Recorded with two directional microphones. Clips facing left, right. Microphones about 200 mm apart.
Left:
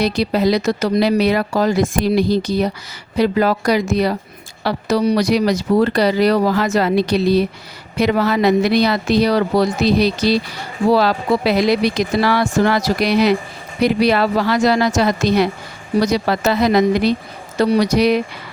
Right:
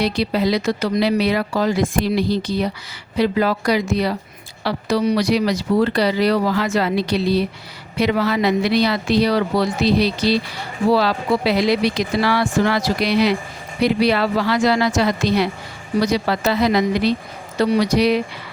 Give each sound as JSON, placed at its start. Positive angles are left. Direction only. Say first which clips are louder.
{"t": 0.0, "sound": "speech", "louder": "left 3 dB", "side_deg": 45}